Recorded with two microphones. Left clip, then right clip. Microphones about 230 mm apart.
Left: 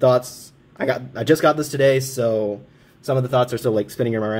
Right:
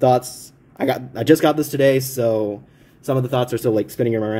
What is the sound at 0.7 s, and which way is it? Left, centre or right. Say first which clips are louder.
Speech: right 1 dB; centre.